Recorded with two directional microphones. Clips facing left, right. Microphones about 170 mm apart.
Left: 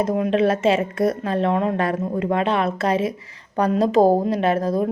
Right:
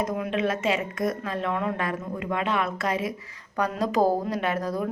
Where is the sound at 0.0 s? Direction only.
30° left (ahead or behind).